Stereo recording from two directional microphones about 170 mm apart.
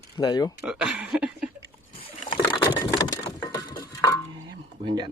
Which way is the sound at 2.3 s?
25° left (ahead or behind).